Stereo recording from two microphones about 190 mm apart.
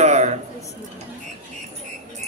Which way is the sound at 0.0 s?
35° right (ahead or behind).